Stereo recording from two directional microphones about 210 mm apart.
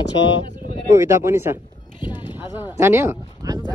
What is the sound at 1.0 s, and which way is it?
Speech, 10° right (ahead or behind).